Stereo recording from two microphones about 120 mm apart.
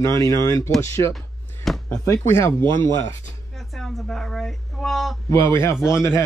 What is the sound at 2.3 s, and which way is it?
Speech, 20° left (ahead or behind).